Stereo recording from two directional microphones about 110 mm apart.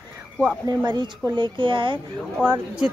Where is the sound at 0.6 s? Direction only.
40° right (ahead or behind).